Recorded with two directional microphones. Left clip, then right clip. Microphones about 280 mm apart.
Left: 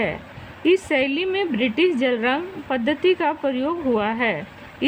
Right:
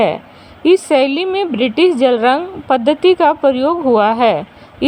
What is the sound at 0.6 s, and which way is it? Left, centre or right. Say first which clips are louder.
A woman's voice: right 8 dB; centre.